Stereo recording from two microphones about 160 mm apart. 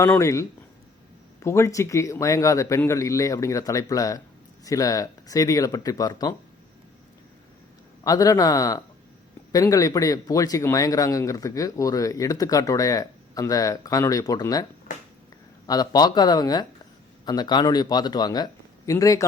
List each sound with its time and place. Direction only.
0.0 s speech: 20° left (ahead or behind)
1.5 s speech: 15° left (ahead or behind)
8.0 s speech: 25° left (ahead or behind)